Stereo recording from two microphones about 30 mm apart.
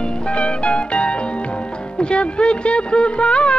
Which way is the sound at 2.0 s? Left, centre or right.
Left.